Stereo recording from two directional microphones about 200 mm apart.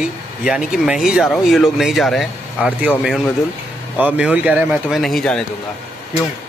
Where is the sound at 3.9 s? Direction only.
5° right (ahead or behind).